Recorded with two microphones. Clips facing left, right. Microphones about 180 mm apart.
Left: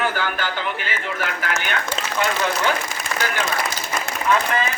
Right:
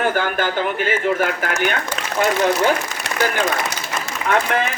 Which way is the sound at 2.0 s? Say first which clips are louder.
Even; 30° left (ahead or behind).